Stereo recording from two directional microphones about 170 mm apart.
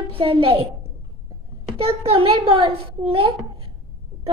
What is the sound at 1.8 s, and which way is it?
Speech, 35° right (ahead or behind).